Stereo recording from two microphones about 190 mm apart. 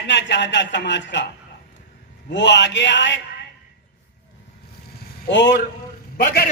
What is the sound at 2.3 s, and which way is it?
Speech, 70° left (ahead or behind).